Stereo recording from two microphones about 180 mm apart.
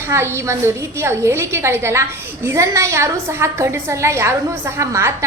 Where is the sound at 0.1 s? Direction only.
15° right (ahead or behind).